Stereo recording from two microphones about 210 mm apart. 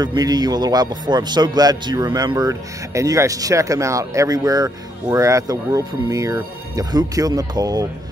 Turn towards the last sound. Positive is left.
turn(degrees=-20)  # may be behind; listen again after turning